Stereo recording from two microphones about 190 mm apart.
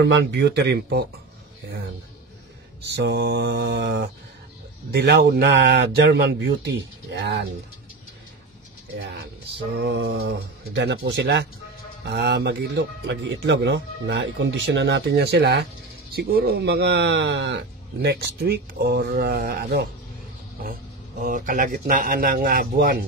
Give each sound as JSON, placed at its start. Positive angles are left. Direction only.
{"t": 0.0, "sound": "speech", "side_deg": -65}
{"t": 2.8, "sound": "speech", "side_deg": -65}
{"t": 9.0, "sound": "speech", "side_deg": -55}
{"t": 21.2, "sound": "speech", "side_deg": -45}